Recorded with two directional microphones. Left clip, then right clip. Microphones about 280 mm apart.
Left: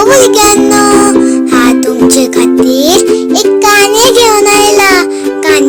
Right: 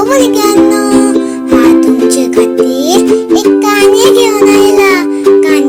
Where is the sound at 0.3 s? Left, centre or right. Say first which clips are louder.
Left 2 dB; left.